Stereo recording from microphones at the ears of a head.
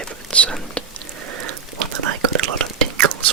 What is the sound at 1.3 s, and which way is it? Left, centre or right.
Whispering, right.